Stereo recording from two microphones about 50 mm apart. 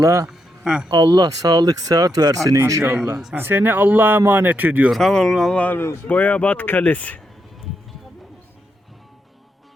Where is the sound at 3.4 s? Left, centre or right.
Right.